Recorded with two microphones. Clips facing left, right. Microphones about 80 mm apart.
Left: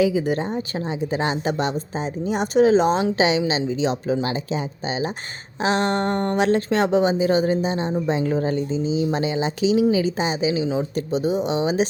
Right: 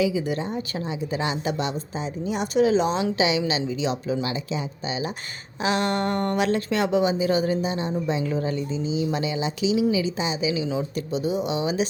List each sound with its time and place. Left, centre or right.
0.0 s a woman's voice: left